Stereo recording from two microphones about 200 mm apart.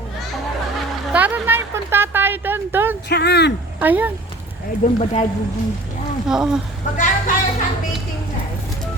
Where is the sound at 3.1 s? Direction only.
55° left (ahead or behind).